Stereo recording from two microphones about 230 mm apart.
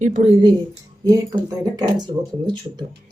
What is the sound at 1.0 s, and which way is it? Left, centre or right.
Speech, centre.